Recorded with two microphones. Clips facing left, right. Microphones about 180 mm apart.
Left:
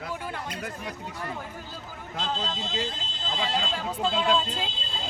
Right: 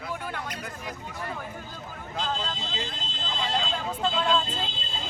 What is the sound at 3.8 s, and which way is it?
Speech, 10° left (ahead or behind).